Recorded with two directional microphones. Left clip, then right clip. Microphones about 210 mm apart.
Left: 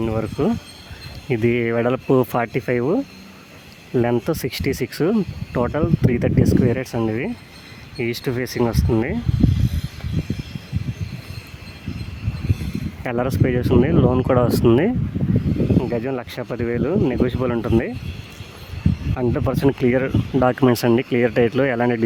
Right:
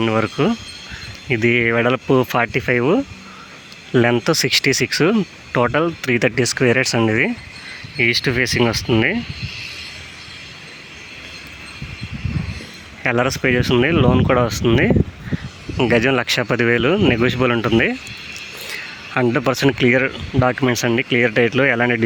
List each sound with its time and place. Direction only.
0.0 s speech: centre (ahead or behind)
13.0 s speech: 5° left (ahead or behind)
15.8 s speech: 5° right (ahead or behind)
19.1 s speech: centre (ahead or behind)